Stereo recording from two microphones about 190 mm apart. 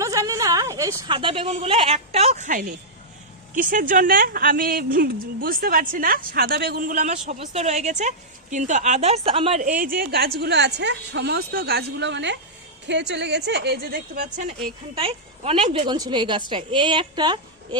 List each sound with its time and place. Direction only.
0.0 s a woman's voice: 15° right (ahead or behind)
9.6 s a woman's voice: 45° right (ahead or behind)
14.9 s a woman's voice: 30° right (ahead or behind)